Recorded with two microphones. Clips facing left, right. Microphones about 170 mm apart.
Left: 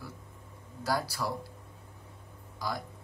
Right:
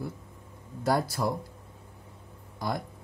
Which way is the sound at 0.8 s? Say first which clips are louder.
Right 5 dB; 50° right (ahead or behind).